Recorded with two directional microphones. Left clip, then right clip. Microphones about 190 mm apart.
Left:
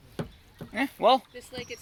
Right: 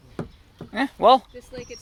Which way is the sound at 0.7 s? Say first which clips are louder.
Right 6 dB; 20° right (ahead or behind).